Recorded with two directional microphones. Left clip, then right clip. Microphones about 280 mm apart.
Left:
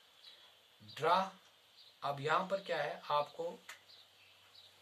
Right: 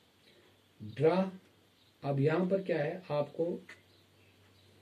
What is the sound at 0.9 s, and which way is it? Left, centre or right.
Speech, left.